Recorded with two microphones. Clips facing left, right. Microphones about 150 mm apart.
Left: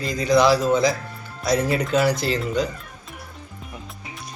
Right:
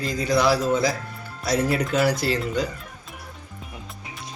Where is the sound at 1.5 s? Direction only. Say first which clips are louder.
Left 2 dB; 20° left (ahead or behind).